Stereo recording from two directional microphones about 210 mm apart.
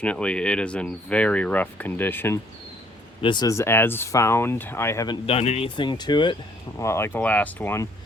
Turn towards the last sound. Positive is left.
turn(degrees=10)  # may be behind; listen again after turning